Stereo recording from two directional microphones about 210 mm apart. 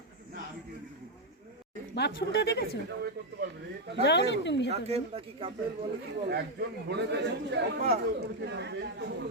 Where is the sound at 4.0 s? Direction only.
55° left (ahead or behind).